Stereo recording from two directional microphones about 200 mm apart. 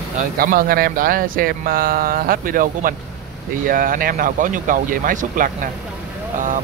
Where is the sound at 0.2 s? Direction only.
45° right (ahead or behind).